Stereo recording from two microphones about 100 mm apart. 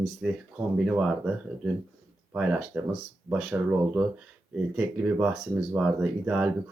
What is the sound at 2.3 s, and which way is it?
Speech, 10° right (ahead or behind).